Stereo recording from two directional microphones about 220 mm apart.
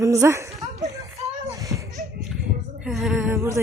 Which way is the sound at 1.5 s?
15° right (ahead or behind).